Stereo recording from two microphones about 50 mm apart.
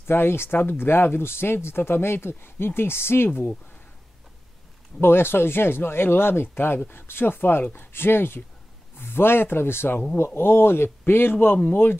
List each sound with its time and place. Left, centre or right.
0.0 s speech: left
3.3 s speech: left
5.0 s speech: left